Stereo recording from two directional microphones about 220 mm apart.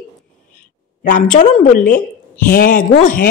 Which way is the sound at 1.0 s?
35° left (ahead or behind).